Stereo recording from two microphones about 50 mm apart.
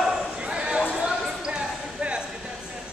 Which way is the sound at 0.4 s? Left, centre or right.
Right.